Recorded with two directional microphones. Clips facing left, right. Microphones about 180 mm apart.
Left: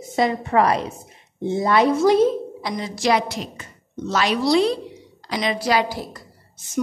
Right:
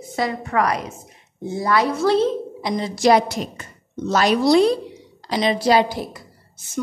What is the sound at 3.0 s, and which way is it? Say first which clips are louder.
A woman's voice: right 4 dB; 45° right (ahead or behind).